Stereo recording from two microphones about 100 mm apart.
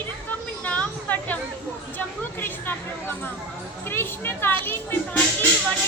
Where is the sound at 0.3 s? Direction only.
15° left (ahead or behind).